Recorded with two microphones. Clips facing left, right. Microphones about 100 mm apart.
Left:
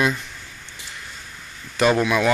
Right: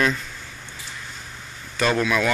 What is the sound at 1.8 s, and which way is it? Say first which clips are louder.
Speech: left 3 dB; 15° left (ahead or behind).